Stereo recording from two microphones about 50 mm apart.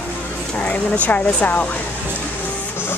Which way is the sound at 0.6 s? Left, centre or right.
Left.